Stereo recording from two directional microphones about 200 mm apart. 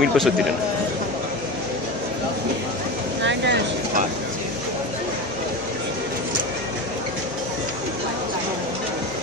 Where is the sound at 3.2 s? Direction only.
60° right (ahead or behind).